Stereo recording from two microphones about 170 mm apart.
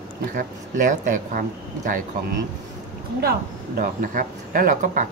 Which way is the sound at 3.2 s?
60° right (ahead or behind).